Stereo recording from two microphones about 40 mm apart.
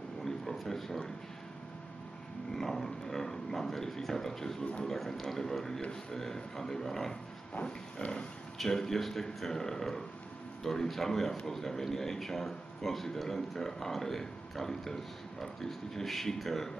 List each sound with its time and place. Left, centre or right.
0.2 s a sound: centre
2.5 s speech: centre
7.6 s pig: left
8.5 s speech: centre